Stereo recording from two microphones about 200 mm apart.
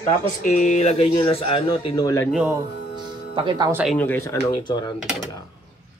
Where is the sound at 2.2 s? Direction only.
5° right (ahead or behind).